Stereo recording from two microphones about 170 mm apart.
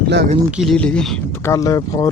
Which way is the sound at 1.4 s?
15° left (ahead or behind).